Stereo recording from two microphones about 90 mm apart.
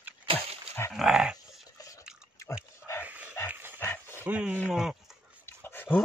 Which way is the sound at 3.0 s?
20° right (ahead or behind).